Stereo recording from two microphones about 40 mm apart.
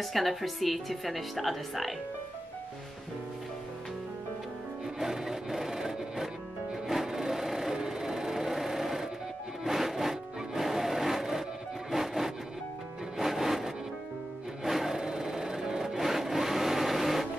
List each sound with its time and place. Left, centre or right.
0.0 s speech: centre
5.0 s wood: centre
6.9 s sewing machine: centre
9.7 s music: centre
11.9 s a sound: centre
13.2 s music: centre
14.6 s wood: centre